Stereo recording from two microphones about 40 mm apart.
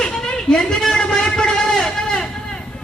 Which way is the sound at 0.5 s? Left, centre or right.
Centre.